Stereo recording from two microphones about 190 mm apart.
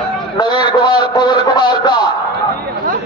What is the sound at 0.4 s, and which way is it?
Speech, 20° left (ahead or behind).